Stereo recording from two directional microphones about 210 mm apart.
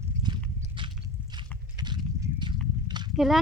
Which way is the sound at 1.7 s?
20° right (ahead or behind).